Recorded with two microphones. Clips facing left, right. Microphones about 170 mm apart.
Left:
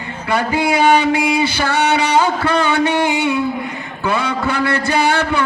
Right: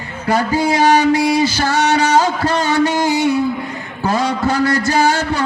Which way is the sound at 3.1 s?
40° right (ahead or behind).